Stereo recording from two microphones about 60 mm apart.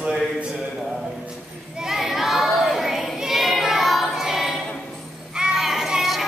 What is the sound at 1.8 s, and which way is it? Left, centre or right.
Child singing, centre.